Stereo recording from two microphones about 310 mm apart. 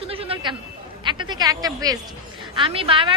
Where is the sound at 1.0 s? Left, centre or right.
Centre.